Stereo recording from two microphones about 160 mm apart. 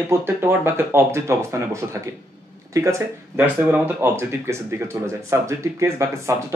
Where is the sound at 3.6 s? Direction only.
10° right (ahead or behind).